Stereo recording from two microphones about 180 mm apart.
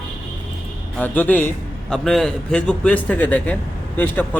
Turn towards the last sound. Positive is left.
turn(degrees=10)  # may be behind; listen again after turning